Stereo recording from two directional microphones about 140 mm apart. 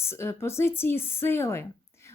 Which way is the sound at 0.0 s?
20° left (ahead or behind).